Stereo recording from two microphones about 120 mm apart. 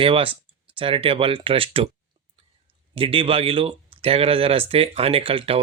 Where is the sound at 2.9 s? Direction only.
50° right (ahead or behind).